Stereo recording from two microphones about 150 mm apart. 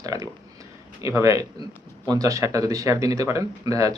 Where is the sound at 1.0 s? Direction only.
20° right (ahead or behind).